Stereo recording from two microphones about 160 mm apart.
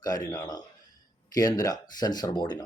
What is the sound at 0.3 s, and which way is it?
Speech, 25° left (ahead or behind).